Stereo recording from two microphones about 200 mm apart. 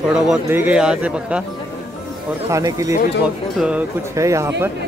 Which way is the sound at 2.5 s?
15° right (ahead or behind).